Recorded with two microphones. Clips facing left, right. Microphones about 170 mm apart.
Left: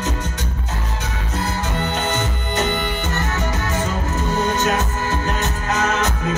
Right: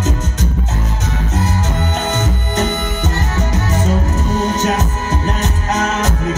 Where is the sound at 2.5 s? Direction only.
40° right (ahead or behind).